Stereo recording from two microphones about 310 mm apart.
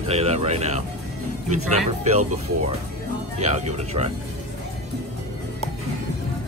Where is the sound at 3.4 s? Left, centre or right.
Right.